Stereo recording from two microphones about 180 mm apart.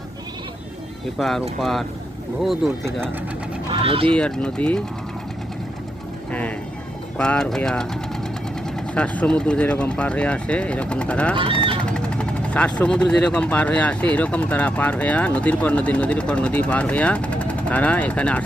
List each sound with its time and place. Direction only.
1.2 s speech: centre (ahead or behind)
3.7 s speech: 30° right (ahead or behind)
4.1 s speech: 5° left (ahead or behind)
7.2 s speech: 5° left (ahead or behind)
9.0 s speech: 5° left (ahead or behind)